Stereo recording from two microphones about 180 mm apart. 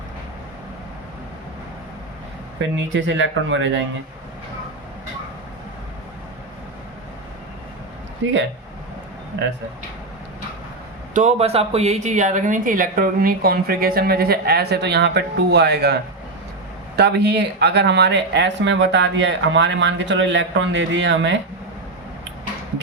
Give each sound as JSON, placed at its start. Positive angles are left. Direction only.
{"t": 2.6, "sound": "speech", "side_deg": -90}
{"t": 8.2, "sound": "speech", "side_deg": -90}
{"t": 11.1, "sound": "speech", "side_deg": -40}
{"t": 17.0, "sound": "speech", "side_deg": -65}